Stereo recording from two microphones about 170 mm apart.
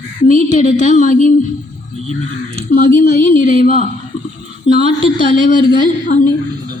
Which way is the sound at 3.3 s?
50° left (ahead or behind).